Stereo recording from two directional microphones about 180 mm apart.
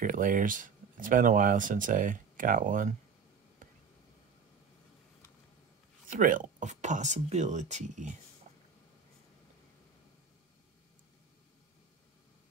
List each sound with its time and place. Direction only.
0.0 s speech: 50° right (ahead or behind)
6.0 s speech: 45° right (ahead or behind)
8.5 s vehicle: 45° right (ahead or behind)